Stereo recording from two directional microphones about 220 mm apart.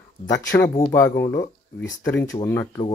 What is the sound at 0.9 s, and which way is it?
Speech, 10° left (ahead or behind).